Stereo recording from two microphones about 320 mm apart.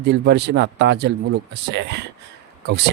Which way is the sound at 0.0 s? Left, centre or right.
Right.